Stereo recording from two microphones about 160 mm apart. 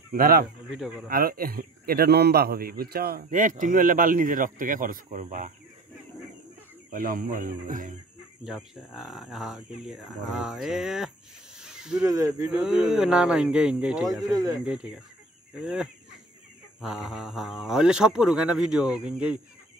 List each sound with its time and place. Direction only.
0.1 s speech: 65° right (ahead or behind)
0.7 s speech: 5° right (ahead or behind)
1.0 s a man's voice: 65° right (ahead or behind)
3.3 s speech: 55° right (ahead or behind)
6.9 s speech: 60° right (ahead or behind)
8.5 s speech: centre (ahead or behind)
11.5 s a sound: 5° right (ahead or behind)
12.1 s speech: 20° right (ahead or behind)
12.4 s speech: 5° right (ahead or behind)
14.2 s speech: 25° right (ahead or behind)
14.6 s speech: 5° right (ahead or behind)
17.1 s speech: centre (ahead or behind)